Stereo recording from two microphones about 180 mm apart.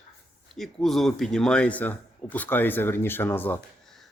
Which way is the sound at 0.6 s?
Centre (ahead or behind).